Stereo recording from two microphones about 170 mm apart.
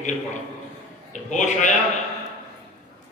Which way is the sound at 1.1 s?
45° left (ahead or behind).